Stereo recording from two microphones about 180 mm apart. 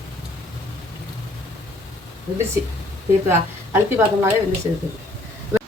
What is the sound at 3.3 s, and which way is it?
A woman's voice, 15° right (ahead or behind).